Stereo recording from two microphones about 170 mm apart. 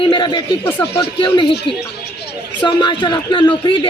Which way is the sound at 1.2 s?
30° left (ahead or behind).